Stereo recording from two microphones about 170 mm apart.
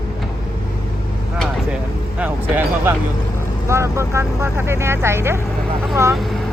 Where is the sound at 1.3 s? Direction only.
Centre (ahead or behind).